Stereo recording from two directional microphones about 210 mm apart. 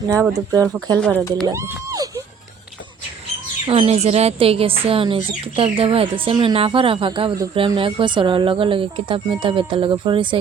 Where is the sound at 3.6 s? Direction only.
30° right (ahead or behind).